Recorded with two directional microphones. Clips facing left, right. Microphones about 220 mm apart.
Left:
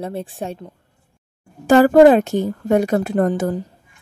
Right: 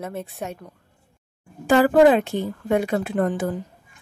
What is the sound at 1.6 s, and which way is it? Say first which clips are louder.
A woman's voice: left 5 dB; 45° left (ahead or behind).